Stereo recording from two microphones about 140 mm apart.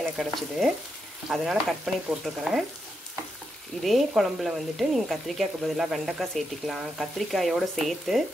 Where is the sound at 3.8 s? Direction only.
Centre (ahead or behind).